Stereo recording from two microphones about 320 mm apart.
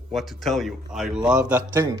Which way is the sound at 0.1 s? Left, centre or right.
Centre.